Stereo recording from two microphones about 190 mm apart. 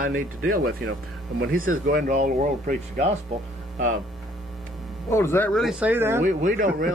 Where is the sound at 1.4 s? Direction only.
50° right (ahead or behind).